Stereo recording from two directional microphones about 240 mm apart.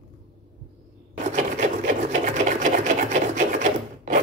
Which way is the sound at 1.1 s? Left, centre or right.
Right.